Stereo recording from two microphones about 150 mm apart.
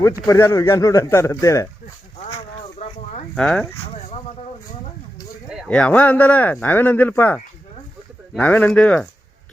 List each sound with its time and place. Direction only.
0.3 s speech: 20° left (ahead or behind)
2.7 s a sound: 50° left (ahead or behind)
3.3 s speech: 5° left (ahead or behind)
5.6 s speech: 10° left (ahead or behind)